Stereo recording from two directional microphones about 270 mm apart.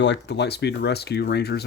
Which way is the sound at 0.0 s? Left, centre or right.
Left.